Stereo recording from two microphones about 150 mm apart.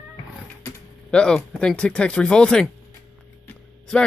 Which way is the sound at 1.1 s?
5° left (ahead or behind).